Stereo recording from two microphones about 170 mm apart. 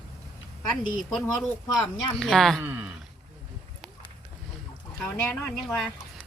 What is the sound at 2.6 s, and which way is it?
Speech, 15° right (ahead or behind).